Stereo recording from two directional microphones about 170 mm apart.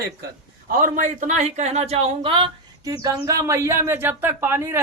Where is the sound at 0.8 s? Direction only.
50° right (ahead or behind); by 2.5 s 30° right (ahead or behind).